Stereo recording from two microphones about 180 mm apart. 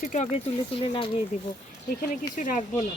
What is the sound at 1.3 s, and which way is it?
Speech, 45° left (ahead or behind).